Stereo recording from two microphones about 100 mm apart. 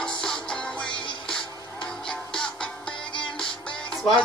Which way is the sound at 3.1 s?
55° left (ahead or behind).